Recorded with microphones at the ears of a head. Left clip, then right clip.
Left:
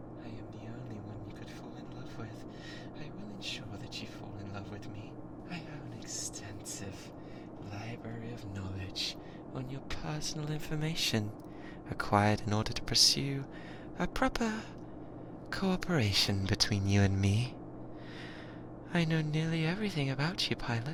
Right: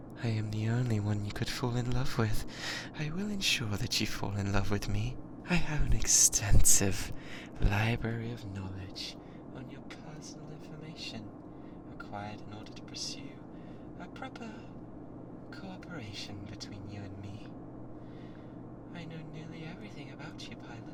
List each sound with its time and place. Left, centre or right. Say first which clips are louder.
0.3 s speech: right 9 dB; right
10.1 s speech: left 8 dB; left
18.9 s speech: left 15 dB; left